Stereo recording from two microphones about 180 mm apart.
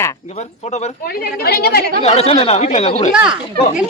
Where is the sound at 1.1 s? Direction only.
60° left (ahead or behind).